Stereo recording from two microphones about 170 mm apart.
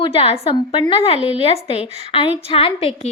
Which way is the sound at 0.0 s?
35° left (ahead or behind).